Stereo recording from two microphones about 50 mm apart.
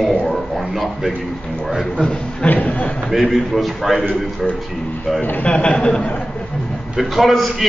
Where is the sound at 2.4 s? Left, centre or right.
Left.